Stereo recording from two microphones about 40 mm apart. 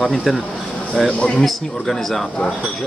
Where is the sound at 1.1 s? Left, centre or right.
Left.